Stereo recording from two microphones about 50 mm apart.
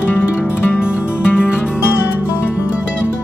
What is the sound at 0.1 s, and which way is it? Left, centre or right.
Music, left.